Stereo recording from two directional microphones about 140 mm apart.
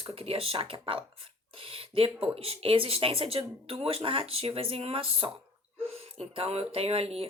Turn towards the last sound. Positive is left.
turn(degrees=-45)  # may be behind; listen again after turning